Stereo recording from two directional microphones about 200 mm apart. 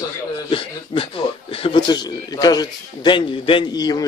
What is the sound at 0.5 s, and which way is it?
Speech, 25° left (ahead or behind).